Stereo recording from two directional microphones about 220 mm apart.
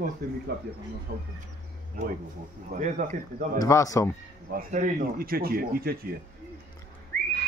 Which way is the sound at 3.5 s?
15° left (ahead or behind).